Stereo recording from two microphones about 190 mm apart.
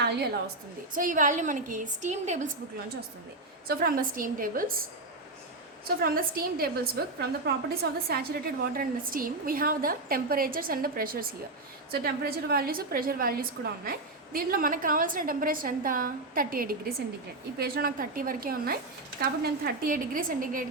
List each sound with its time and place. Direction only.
0.0 s a woman's voice: 60° right (ahead or behind)
0.9 s a woman's voice: 45° right (ahead or behind)
3.7 s a woman's voice: 50° right (ahead or behind)
6.0 s a woman's voice: 50° right (ahead or behind)